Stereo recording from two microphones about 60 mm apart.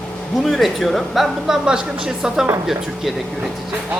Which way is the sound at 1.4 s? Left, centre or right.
Centre.